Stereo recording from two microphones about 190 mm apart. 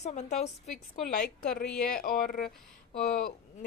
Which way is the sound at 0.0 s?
35° left (ahead or behind).